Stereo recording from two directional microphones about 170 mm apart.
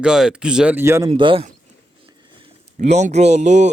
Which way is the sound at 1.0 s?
30° right (ahead or behind).